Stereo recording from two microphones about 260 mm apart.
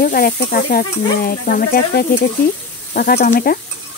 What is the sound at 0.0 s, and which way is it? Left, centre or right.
Stir, left.